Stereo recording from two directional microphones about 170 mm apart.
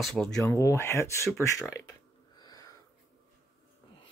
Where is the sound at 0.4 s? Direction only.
15° left (ahead or behind).